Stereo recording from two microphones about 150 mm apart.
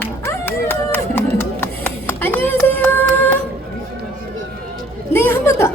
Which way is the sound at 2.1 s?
15° left (ahead or behind).